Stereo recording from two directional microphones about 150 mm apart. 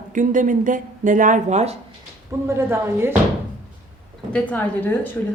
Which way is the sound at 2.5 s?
15° right (ahead or behind).